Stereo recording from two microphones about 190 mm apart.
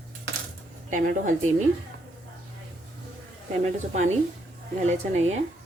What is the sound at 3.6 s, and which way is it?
Speech, 40° right (ahead or behind).